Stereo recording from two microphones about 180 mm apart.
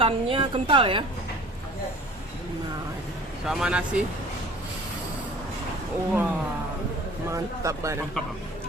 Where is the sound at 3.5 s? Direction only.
5° right (ahead or behind).